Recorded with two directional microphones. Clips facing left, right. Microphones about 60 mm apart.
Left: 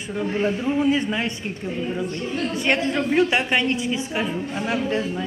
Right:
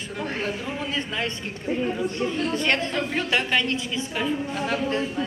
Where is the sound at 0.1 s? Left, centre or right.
Centre.